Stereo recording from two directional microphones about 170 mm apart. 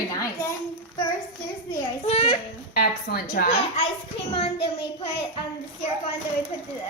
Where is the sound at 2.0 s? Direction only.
35° left (ahead or behind).